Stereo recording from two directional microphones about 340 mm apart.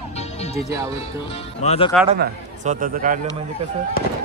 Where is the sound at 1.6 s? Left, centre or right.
Centre.